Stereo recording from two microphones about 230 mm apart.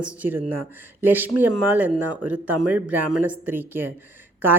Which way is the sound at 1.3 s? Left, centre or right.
Right.